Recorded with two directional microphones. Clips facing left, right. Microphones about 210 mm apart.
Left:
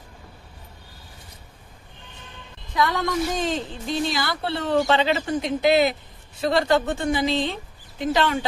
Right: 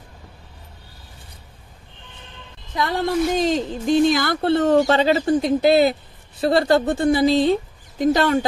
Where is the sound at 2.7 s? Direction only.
30° right (ahead or behind).